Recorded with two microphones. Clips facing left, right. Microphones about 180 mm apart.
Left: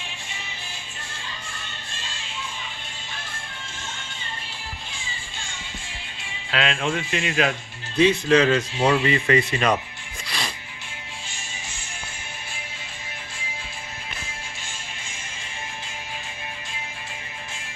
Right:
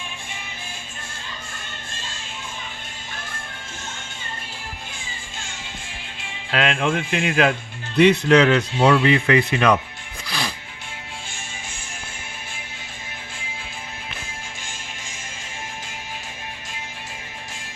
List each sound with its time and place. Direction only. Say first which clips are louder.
6.5 s a man's voice: right 3 dB; 55° right (ahead or behind)